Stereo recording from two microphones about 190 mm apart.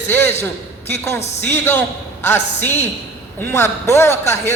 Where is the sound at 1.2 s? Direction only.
35° left (ahead or behind).